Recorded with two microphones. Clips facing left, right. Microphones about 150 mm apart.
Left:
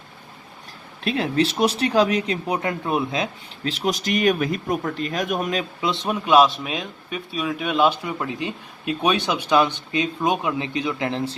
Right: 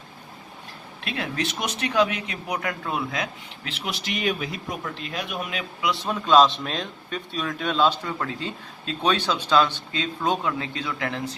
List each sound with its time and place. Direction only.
1.0 s speech: 30° left (ahead or behind)
3.6 s speech: 35° left (ahead or behind)
5.8 s a man's voice: 20° left (ahead or behind)